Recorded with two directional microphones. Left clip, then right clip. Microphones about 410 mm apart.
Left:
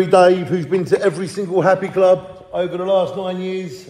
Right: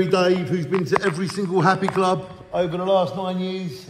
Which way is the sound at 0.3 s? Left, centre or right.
Centre.